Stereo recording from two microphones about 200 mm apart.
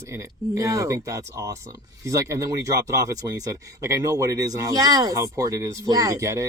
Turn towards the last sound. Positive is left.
turn(degrees=-15)  # may be behind; listen again after turning